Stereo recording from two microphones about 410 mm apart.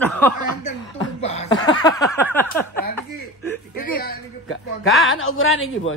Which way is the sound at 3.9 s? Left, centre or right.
Left.